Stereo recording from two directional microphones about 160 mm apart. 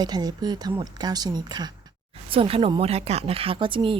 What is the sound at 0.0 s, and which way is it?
A woman's voice, 25° right (ahead or behind).